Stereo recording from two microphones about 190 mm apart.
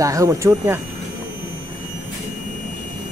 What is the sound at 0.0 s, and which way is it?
Speech, 15° right (ahead or behind).